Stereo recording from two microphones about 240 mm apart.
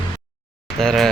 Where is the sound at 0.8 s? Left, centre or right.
Centre.